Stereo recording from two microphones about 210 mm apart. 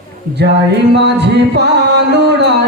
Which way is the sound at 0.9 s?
55° right (ahead or behind).